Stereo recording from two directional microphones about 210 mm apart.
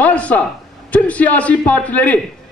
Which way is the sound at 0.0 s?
5° left (ahead or behind).